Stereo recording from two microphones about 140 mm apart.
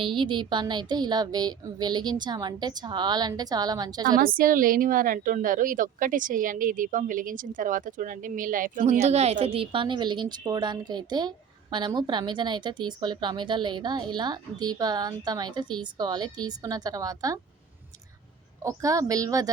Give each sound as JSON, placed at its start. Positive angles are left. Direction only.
{"t": 0.0, "sound": "a woman's voice", "side_deg": -35}
{"t": 4.2, "sound": "a woman's voice", "side_deg": -90}
{"t": 8.9, "sound": "a woman's voice", "side_deg": -50}
{"t": 18.6, "sound": "a woman's voice", "side_deg": -25}